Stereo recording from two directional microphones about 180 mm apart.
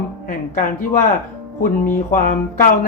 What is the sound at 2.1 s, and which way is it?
Speech, 50° left (ahead or behind).